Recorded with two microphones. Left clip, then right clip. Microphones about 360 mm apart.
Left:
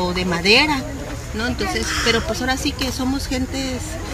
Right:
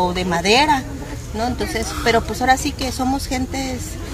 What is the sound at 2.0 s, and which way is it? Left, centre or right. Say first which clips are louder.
Speech: right 5 dB; right.